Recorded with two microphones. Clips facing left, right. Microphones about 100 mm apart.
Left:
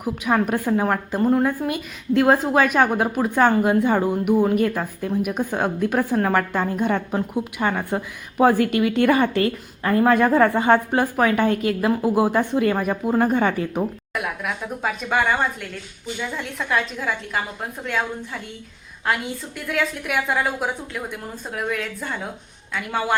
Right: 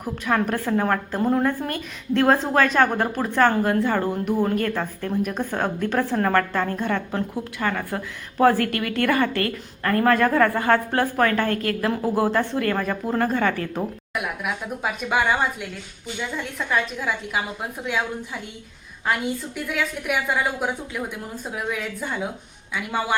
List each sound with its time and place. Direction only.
0.0 s speech: 10° left (ahead or behind)
14.1 s a woman's voice: 5° right (ahead or behind)